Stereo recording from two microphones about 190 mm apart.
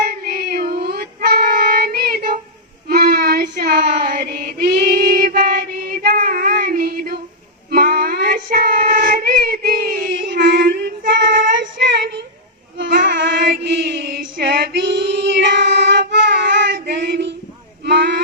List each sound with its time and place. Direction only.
0.0 s child singing: 50° right (ahead or behind)
7.7 s music: 50° right (ahead or behind)
12.7 s child singing: 70° right (ahead or behind)
13.0 s mantra: 65° right (ahead or behind)
14.1 s female singing: 55° right (ahead or behind)
17.8 s a sound: 60° right (ahead or behind)